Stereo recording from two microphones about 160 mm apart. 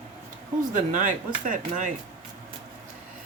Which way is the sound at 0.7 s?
55° right (ahead or behind).